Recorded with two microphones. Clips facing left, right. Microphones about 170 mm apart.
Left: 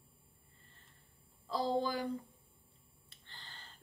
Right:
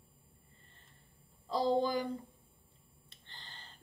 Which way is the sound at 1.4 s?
5° left (ahead or behind).